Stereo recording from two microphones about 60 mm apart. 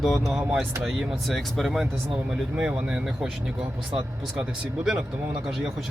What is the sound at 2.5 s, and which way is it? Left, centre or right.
Speech, centre.